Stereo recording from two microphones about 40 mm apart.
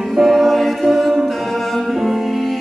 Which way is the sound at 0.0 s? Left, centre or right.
Centre.